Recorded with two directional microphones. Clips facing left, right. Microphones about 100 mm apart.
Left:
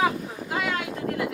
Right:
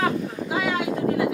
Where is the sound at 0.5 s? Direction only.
Centre (ahead or behind).